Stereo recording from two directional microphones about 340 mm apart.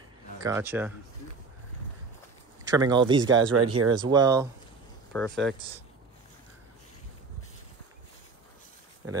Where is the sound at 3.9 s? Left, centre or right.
Centre.